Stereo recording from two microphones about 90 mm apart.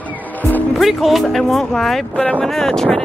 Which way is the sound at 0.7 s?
Centre (ahead or behind).